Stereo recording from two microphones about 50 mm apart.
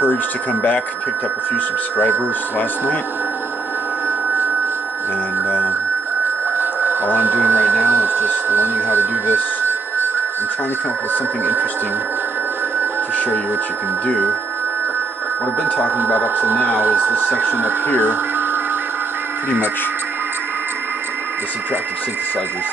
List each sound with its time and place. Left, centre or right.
6.6 s a sound: right
7.2 s speech: right
11.1 s speech: right
16.0 s speech: right
17.9 s radio: right
19.5 s speech: right